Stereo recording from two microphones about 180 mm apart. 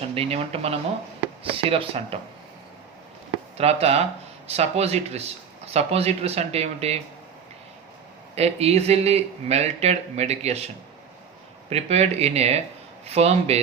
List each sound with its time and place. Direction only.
0.1 s speech: 35° right (ahead or behind)
3.6 s speech: 35° right (ahead or behind)
8.4 s speech: 35° right (ahead or behind)
11.7 s speech: 35° right (ahead or behind)